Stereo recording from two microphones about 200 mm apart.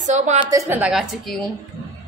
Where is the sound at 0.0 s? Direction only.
35° right (ahead or behind).